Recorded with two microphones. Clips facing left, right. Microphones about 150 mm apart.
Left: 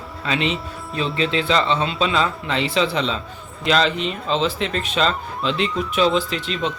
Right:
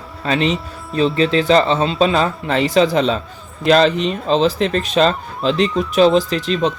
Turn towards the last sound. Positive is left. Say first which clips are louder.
# right 6 dB
turn(degrees=-40)  # may be behind; listen again after turning